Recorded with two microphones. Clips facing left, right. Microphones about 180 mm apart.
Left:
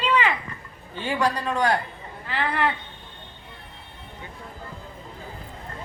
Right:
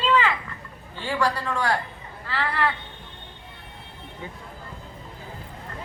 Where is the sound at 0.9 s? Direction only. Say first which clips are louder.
Left 1 dB; 20° left (ahead or behind).